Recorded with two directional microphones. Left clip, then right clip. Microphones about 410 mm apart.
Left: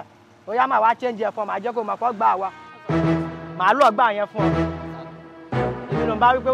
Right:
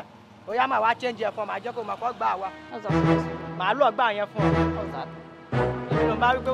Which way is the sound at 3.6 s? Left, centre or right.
Left.